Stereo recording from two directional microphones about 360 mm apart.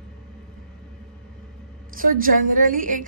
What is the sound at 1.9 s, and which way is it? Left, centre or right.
A woman's voice, right.